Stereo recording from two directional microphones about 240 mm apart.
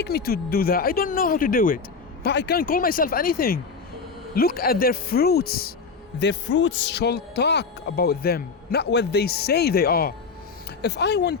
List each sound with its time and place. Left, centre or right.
0.0 s speech: left